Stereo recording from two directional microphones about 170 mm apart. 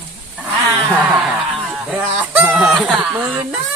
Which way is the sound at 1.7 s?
10° right (ahead or behind).